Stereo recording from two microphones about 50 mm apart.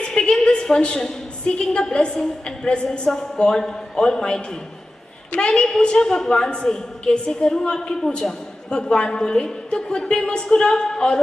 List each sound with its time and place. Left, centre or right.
0.0 s a woman's voice: centre
3.1 s a woman's voice: centre
5.5 s a woman's voice: centre